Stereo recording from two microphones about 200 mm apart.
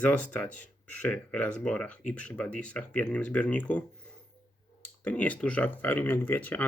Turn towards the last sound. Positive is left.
turn(degrees=10)  # may be behind; listen again after turning